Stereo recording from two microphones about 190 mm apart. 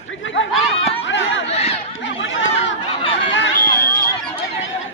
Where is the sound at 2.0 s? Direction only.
80° left.